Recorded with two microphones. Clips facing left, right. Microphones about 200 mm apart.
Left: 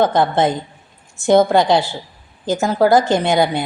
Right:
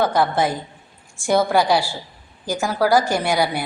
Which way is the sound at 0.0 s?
20° left (ahead or behind).